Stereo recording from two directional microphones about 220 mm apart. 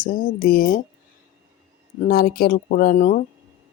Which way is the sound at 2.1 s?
45° left (ahead or behind).